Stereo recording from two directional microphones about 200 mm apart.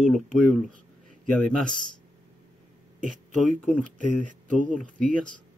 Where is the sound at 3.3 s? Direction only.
Centre (ahead or behind).